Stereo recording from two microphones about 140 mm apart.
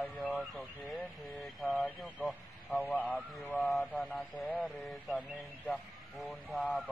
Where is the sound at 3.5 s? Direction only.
Centre (ahead or behind).